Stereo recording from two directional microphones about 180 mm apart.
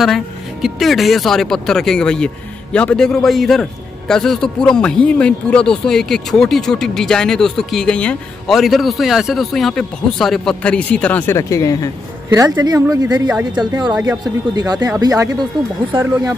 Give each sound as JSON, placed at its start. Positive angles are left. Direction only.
{"t": 0.0, "sound": "speech", "side_deg": 0}
{"t": 12.3, "sound": "speech", "side_deg": -20}